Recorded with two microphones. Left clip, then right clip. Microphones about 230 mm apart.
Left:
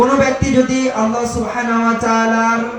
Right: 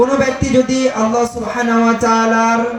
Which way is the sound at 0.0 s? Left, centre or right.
Right.